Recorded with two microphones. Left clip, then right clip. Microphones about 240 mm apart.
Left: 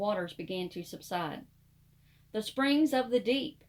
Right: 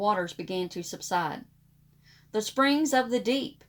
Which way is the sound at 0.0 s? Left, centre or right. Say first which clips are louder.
Right 6 dB; right.